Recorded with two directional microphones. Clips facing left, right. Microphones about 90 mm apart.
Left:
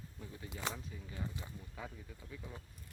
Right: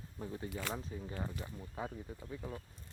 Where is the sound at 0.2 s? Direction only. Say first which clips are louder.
Right 6 dB; 35° right (ahead or behind).